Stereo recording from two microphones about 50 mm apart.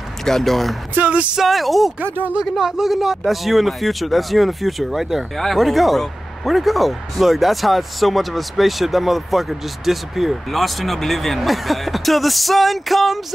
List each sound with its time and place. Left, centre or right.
0.2 s speech: centre
0.9 s music: right
1.3 s speech: centre